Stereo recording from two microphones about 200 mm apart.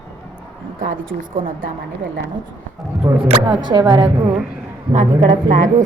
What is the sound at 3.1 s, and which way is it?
Speech, 15° right (ahead or behind).